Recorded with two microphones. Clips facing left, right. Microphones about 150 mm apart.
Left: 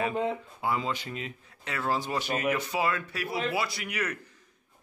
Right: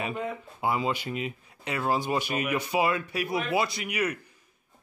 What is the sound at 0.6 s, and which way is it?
A man's voice, 15° right (ahead or behind).